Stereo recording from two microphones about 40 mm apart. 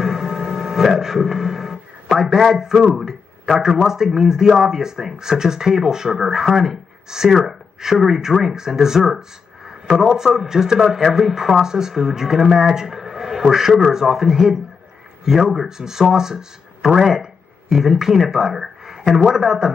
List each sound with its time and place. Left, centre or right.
0.0 s music: centre
2.1 s speech: centre